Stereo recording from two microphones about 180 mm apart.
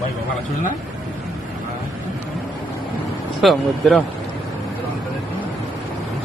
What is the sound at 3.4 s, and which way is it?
Speech, centre (ahead or behind).